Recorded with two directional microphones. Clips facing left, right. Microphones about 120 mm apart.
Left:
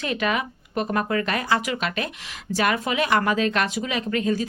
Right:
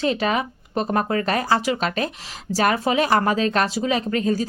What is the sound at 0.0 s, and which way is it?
Speech, 30° right (ahead or behind).